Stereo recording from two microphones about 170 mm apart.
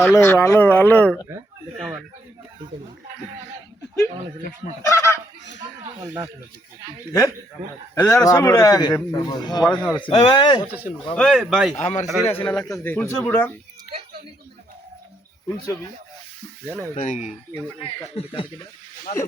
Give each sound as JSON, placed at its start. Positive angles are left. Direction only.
{"t": 0.0, "sound": "speech", "side_deg": 10}
{"t": 4.9, "sound": "speech", "side_deg": 15}
{"t": 7.9, "sound": "a man's voice", "side_deg": 20}
{"t": 9.6, "sound": "speech", "side_deg": 5}
{"t": 10.1, "sound": "a man's voice", "side_deg": 30}
{"t": 11.1, "sound": "speech", "side_deg": 5}
{"t": 11.8, "sound": "a man's voice", "side_deg": 45}
{"t": 12.2, "sound": "speech", "side_deg": 10}
{"t": 15.4, "sound": "a man's voice", "side_deg": 20}
{"t": 16.9, "sound": "a man's voice", "side_deg": 50}
{"t": 18.2, "sound": "speech", "side_deg": 35}